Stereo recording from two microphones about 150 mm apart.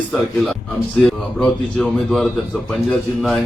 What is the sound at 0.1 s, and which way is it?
Speech, centre (ahead or behind).